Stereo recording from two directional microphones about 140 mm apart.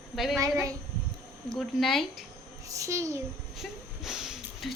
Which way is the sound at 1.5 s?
Centre (ahead or behind).